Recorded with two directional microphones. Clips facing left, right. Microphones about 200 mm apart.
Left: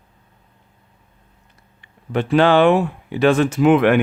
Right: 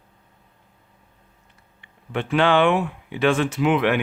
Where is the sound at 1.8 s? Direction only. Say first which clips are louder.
Left 6 dB; 40° left (ahead or behind).